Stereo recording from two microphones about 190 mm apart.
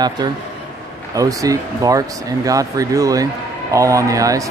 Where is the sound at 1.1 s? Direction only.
15° right (ahead or behind).